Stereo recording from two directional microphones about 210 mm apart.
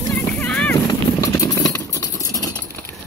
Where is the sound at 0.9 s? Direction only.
15° left (ahead or behind).